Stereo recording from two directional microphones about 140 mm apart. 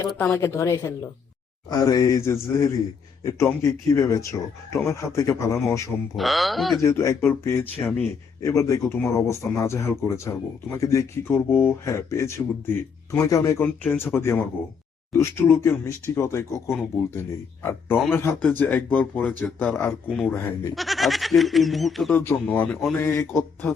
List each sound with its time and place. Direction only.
0.2 s speech: 15° left (ahead or behind)
6.1 s speech: centre (ahead or behind)
6.8 s speech: 20° left (ahead or behind); by 20.3 s 5° left (ahead or behind)
20.3 s speech: 15° left (ahead or behind)
20.7 s speech: centre (ahead or behind)
22.1 s speech: 15° left (ahead or behind)
23.0 s speech: 15° left (ahead or behind)